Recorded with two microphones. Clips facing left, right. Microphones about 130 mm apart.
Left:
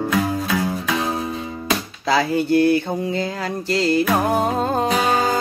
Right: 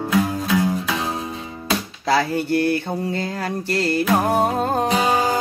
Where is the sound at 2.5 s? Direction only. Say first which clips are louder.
Left 4 dB; 15° left (ahead or behind).